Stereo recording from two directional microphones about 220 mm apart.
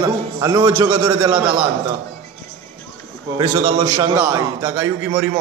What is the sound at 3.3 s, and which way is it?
A man's voice, 15° right (ahead or behind).